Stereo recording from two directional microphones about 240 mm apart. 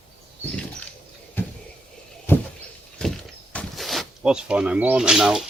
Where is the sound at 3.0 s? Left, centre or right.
Centre.